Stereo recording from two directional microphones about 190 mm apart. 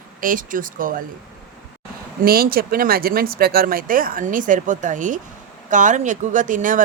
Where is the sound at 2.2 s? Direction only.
50° right (ahead or behind).